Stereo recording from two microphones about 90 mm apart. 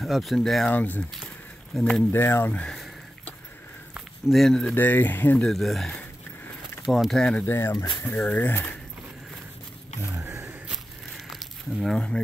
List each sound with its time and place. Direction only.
0.0 s speech: centre (ahead or behind)
0.7 s speech: 20° left (ahead or behind)
2.1 s speech: 25° left (ahead or behind)
2.6 s speech: 5° left (ahead or behind)
4.3 s speech: 5° left (ahead or behind)
4.7 s speech: 20° left (ahead or behind)
5.4 s speech: centre (ahead or behind)
7.4 s speech: 30° left (ahead or behind)
8.0 s speech: 20° left (ahead or behind)
10.0 s a sound: 30° right (ahead or behind)
11.2 s a sound: centre (ahead or behind)